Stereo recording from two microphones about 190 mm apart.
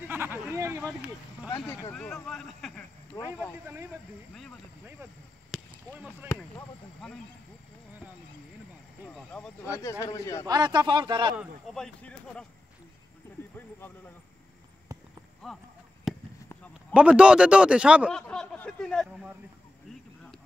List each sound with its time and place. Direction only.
0.1 s speech: 10° right (ahead or behind)
1.7 s speech: 10° left (ahead or behind)
3.3 s speech: 10° right (ahead or behind)
5.5 s a sound: centre (ahead or behind)
9.1 s speech: 5° left (ahead or behind)
9.7 s speech: 15° left (ahead or behind)
10.4 s speech: 20° right (ahead or behind)
11.3 s speech: centre (ahead or behind)
15.4 s chop: centre (ahead or behind)
16.9 s speech: 5° right (ahead or behind)